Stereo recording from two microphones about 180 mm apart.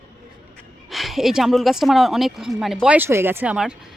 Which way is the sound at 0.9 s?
Centre (ahead or behind).